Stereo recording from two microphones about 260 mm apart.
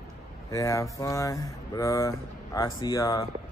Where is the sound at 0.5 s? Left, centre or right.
Centre.